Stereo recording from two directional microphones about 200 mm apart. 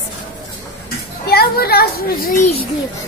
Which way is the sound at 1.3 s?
50° left (ahead or behind).